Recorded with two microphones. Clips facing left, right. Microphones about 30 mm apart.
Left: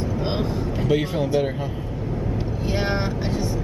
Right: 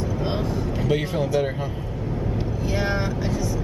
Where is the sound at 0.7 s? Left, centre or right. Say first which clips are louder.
Left 2 dB; centre.